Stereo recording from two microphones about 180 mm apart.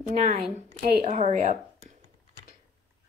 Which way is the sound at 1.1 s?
35° right (ahead or behind).